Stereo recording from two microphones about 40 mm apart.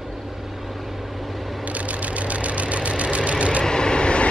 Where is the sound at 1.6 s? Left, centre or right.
Right.